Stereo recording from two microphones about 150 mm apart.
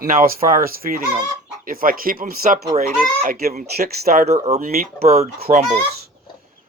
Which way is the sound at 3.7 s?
90° right.